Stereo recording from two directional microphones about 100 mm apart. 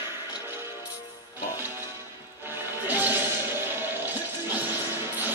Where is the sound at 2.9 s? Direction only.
20° right (ahead or behind).